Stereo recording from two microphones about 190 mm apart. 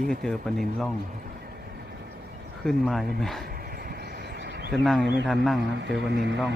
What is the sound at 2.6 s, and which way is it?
Speech, centre (ahead or behind).